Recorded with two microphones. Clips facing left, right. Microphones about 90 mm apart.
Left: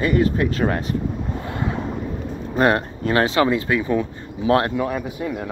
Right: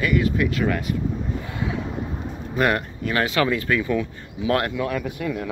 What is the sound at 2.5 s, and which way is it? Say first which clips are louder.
Speech: left 3 dB; 35° left (ahead or behind).